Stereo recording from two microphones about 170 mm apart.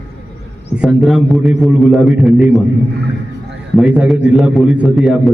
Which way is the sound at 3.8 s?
5° right (ahead or behind).